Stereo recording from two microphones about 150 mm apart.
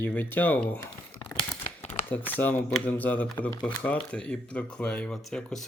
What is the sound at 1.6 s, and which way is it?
Crumpling, 50° left (ahead or behind).